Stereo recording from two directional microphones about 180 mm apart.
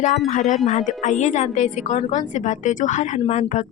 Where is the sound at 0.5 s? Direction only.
40° left (ahead or behind).